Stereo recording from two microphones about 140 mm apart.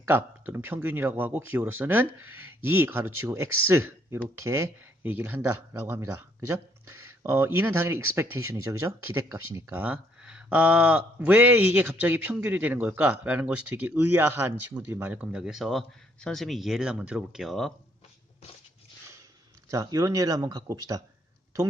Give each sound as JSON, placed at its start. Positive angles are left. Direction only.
{"t": 0.0, "sound": "speech", "side_deg": -15}
{"t": 19.7, "sound": "speech", "side_deg": -25}